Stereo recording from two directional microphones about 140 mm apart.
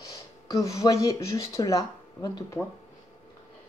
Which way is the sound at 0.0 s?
25° left (ahead or behind).